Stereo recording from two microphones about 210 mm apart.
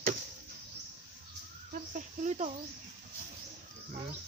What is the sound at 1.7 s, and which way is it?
Speech, 35° right (ahead or behind).